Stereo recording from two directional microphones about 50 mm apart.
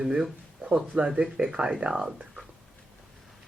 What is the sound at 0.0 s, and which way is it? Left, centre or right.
Speech, centre.